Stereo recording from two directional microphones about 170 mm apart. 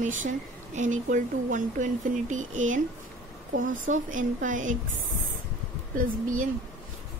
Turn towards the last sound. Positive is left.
turn(degrees=-50)  # may be behind; listen again after turning